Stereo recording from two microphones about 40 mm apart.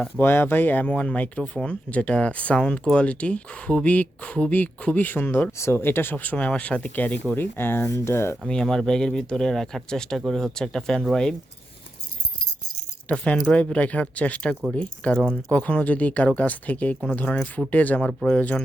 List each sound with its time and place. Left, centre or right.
0.2 s speech: left
5.0 s speech: left
6.3 s speech: left
7.3 s speech: left
8.6 s speech: centre
13.1 s speech: left